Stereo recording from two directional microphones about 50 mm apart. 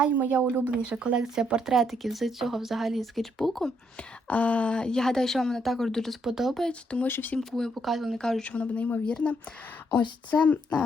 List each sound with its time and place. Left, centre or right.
0.1 s speech: right
1.7 s speech: centre
4.3 s a woman's voice: left; by 6.1 s centre
6.2 s speech: centre
6.7 s speech: left
7.1 s speech: left
7.3 s a woman's voice: centre
8.2 s a woman's voice: centre
8.4 s speech: left